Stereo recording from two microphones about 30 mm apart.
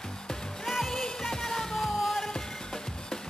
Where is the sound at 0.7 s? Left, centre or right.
Centre.